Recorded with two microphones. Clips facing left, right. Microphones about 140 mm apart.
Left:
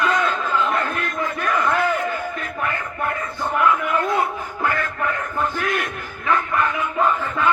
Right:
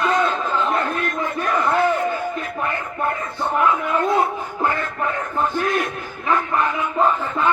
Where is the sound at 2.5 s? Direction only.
25° right (ahead or behind).